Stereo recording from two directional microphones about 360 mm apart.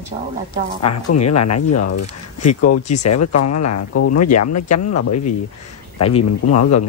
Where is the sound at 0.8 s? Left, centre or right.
Left.